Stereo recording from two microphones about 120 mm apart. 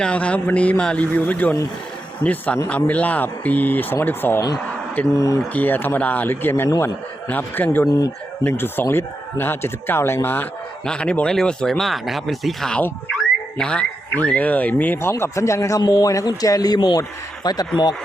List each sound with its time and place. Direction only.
0.0 s speech: 10° left (ahead or behind); by 5.4 s 25° left (ahead or behind)
5.5 s speech: 15° left (ahead or behind)
7.3 s speech: 15° left (ahead or behind)
7.9 s a man's voice: 30° left (ahead or behind)
8.4 s a man's voice: 15° left (ahead or behind); by 17.7 s 35° left (ahead or behind)